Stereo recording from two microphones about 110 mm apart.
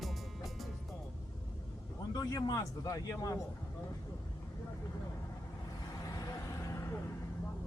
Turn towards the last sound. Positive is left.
turn(degrees=25)  # may be behind; listen again after turning